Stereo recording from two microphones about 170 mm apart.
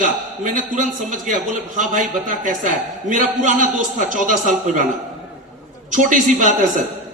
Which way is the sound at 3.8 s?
50° right (ahead or behind).